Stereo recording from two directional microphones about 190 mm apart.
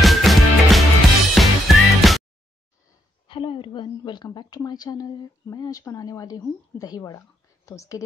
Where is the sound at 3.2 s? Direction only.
25° left (ahead or behind).